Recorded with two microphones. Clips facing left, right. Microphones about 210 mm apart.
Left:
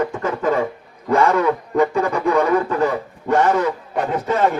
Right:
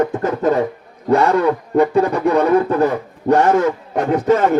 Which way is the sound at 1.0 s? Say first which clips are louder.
Right 2 dB; 35° right (ahead or behind).